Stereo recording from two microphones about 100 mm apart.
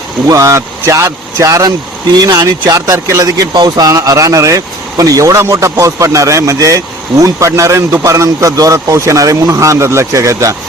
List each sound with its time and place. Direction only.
0.3 s speech: 30° right (ahead or behind)
3.5 s speech: 45° right (ahead or behind)